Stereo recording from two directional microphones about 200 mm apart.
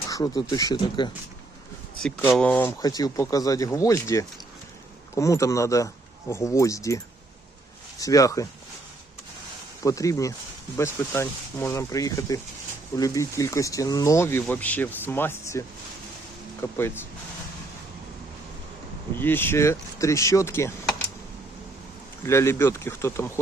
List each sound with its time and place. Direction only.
0.1 s speech: 15° left (ahead or behind)
2.0 s speech: 5° left (ahead or behind)
9.8 s speech: 15° left (ahead or behind)
19.1 s speech: 10° left (ahead or behind)
22.3 s speech: 15° left (ahead or behind)